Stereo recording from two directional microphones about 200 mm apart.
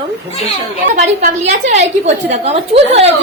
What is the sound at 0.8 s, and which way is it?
A woman's voice, 40° right (ahead or behind).